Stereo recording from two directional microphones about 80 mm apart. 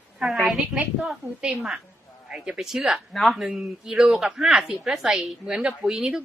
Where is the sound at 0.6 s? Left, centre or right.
Centre.